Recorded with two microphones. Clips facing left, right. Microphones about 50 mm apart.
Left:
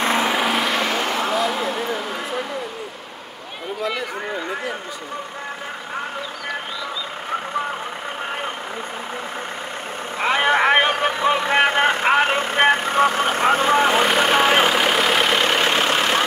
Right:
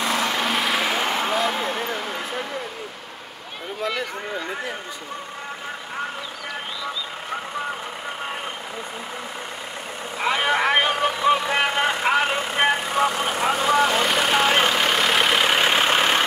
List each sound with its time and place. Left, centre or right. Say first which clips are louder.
0.2 s vehicle: left 3 dB; centre
1.6 s a sound: left 2 dB; centre
10.1 s vehicle: left 3 dB; left; by 16.2 s centre